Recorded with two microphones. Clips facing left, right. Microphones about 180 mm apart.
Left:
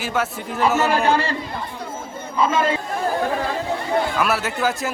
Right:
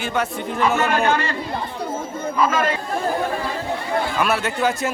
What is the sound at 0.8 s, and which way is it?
Speech, 35° left (ahead or behind).